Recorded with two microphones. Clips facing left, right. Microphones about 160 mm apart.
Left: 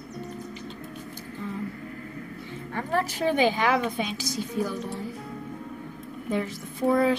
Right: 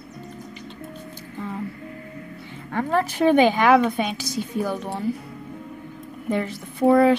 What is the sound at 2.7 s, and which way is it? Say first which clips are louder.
A woman's voice: right 6 dB; 60° right (ahead or behind).